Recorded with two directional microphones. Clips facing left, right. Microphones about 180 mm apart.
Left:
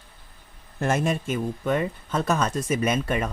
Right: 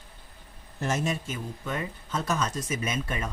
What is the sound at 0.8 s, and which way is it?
Speech, 55° left (ahead or behind).